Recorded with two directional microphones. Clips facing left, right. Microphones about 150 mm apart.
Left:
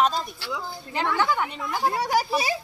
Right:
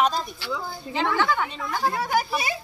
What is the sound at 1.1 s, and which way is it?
Speech, 10° left (ahead or behind).